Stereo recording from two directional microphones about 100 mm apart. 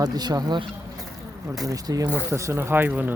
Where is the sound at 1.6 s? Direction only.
35° right (ahead or behind).